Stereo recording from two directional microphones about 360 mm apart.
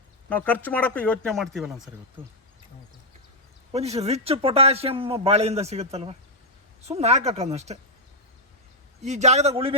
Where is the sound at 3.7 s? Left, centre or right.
Centre.